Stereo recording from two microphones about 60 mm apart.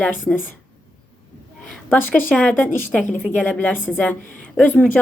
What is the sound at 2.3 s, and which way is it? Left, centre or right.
A woman's voice, centre.